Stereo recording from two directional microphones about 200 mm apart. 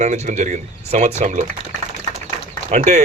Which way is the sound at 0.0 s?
35° right (ahead or behind).